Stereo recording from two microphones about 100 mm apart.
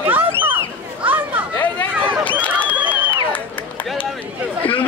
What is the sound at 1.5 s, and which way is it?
Chatter, 20° left (ahead or behind).